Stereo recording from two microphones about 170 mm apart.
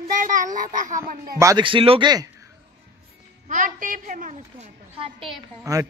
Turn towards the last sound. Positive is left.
turn(degrees=-20)  # may be behind; listen again after turning